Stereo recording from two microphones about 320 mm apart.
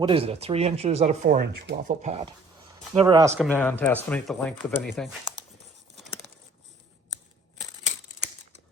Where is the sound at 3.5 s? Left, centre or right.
Centre.